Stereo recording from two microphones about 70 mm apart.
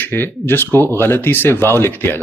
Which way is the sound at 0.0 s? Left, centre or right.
Left.